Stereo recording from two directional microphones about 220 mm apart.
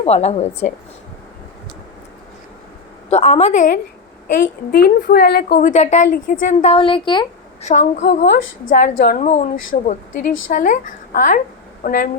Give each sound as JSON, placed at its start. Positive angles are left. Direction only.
{"t": 0.0, "sound": "a woman's voice", "side_deg": 30}
{"t": 3.1, "sound": "a woman's voice", "side_deg": 30}
{"t": 7.6, "sound": "a woman's voice", "side_deg": 35}
{"t": 8.2, "sound": "a woman's voice", "side_deg": 50}